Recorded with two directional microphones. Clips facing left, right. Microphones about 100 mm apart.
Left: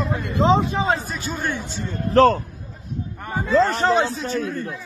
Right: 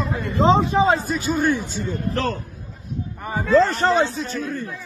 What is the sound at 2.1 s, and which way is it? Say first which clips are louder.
Speech: left 13 dB; 35° left (ahead or behind).